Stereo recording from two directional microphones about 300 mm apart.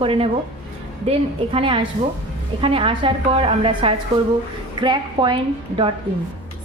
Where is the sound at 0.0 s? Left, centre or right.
Centre.